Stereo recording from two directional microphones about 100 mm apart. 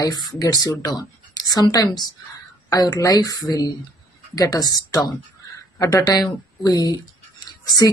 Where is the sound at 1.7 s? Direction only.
40° left (ahead or behind).